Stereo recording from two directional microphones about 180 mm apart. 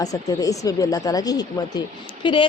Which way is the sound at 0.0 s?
20° left (ahead or behind).